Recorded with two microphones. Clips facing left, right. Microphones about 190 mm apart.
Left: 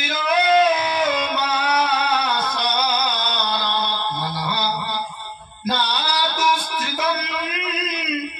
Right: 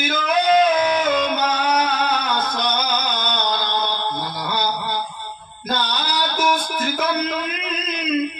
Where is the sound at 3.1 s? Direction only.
50° right (ahead or behind).